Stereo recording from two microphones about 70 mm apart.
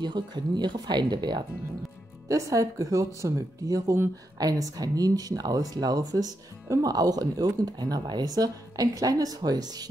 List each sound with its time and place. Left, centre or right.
0.0 s speech: right
2.2 s speech: right
4.4 s speech: right